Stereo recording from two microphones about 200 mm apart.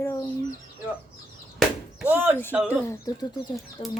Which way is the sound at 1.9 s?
10° right (ahead or behind).